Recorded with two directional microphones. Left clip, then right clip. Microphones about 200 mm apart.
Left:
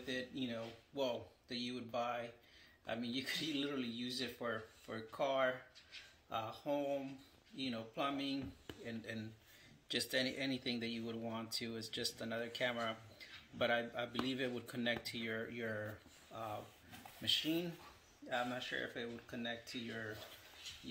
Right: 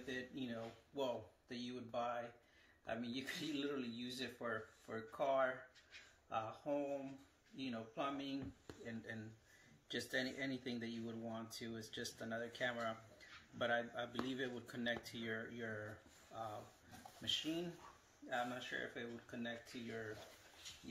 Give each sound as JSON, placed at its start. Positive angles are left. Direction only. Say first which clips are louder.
{"t": 0.0, "sound": "a sound", "louder": "left 4 dB", "side_deg": 25}
{"t": 2.9, "sound": "speech", "louder": "left 4 dB", "side_deg": 20}
{"t": 8.8, "sound": "speech", "louder": "left 3 dB", "side_deg": 35}